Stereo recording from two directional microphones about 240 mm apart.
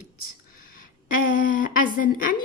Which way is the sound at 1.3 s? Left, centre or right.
Left.